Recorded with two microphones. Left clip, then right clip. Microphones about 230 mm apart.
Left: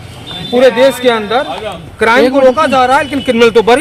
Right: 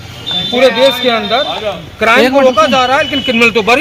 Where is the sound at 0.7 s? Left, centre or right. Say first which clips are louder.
Left 2 dB; centre.